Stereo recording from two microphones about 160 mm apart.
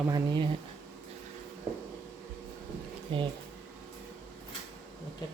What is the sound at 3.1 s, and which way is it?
Speech, 30° right (ahead or behind).